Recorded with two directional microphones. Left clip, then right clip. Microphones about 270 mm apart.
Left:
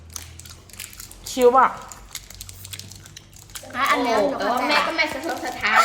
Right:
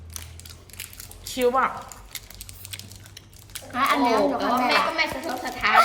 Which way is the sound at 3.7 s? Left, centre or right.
Centre.